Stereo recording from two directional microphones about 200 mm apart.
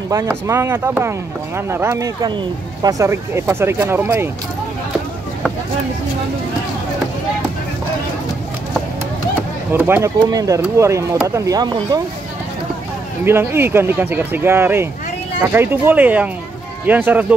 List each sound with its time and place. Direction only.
0.1 s speech: 15° right (ahead or behind)
9.7 s speech: 10° right (ahead or behind)
13.2 s speech: 10° right (ahead or behind)